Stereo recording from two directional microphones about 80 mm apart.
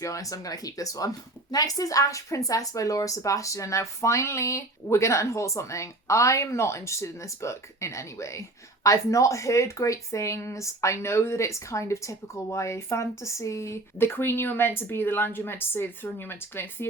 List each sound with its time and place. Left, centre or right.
0.0 s a woman's voice: left